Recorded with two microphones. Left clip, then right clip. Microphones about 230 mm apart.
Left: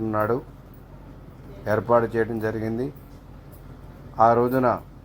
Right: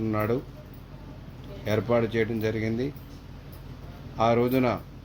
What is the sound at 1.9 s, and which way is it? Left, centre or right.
Speech, left.